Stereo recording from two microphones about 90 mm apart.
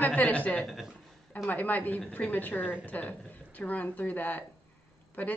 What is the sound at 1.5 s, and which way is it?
Speech, 20° left (ahead or behind).